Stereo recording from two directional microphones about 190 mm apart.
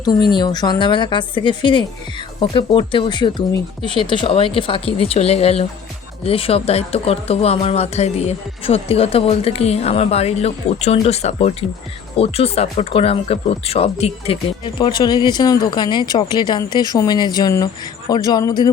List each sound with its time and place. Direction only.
0.3 s speech: 20° left (ahead or behind)